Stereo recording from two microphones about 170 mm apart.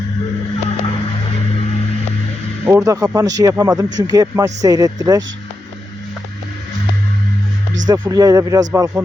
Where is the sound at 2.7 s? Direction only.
20° right (ahead or behind).